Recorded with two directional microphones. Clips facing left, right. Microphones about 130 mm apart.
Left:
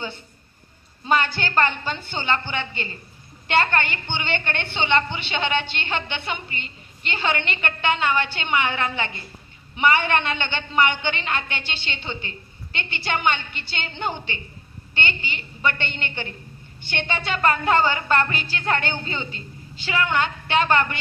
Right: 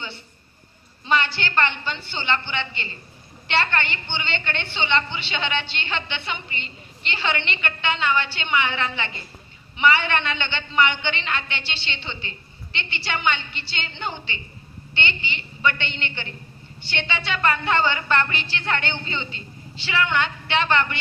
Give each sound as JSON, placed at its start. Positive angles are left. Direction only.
{"t": 1.0, "sound": "a woman's voice", "side_deg": 45}